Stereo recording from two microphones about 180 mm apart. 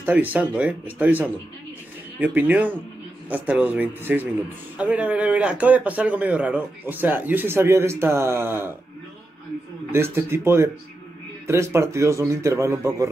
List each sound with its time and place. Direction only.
0.0 s speech: 10° right (ahead or behind)
9.9 s speech: 15° right (ahead or behind)